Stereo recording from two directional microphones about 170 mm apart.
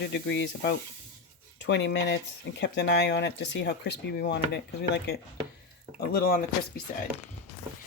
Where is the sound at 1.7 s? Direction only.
90° left.